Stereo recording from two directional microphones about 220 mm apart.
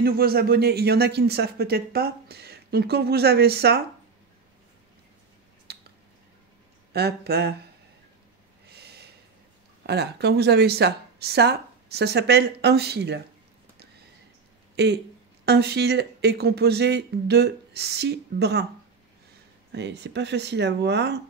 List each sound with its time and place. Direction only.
0.0 s a man's voice: 45° right (ahead or behind)
5.7 s a sound: 50° right (ahead or behind)
6.9 s a man's voice: 45° right (ahead or behind)
8.6 s snort: 50° right (ahead or behind)
9.8 s a man's voice: 50° right (ahead or behind)
14.8 s a man's voice: 50° right (ahead or behind)
19.7 s a man's voice: 50° right (ahead or behind)